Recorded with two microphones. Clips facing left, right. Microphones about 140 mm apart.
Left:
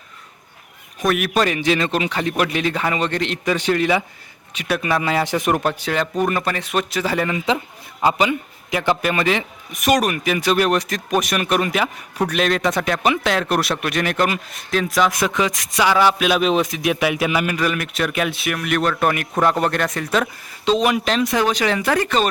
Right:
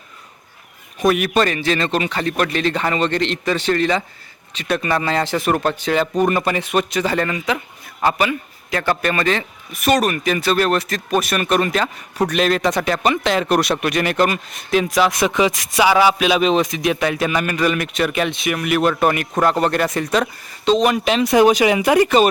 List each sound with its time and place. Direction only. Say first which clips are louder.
0.9 s a man's voice: right 3 dB; centre (ahead or behind)
7.3 s a man's voice: left 1 dB; 25° left (ahead or behind); by 21.0 s 5° left (ahead or behind)
21.0 s speech: right 5 dB; 5° right (ahead or behind)